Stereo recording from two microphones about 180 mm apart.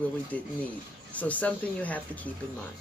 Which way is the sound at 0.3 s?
10° left (ahead or behind).